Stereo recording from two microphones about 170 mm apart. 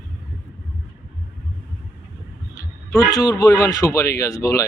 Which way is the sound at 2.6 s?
20° left (ahead or behind).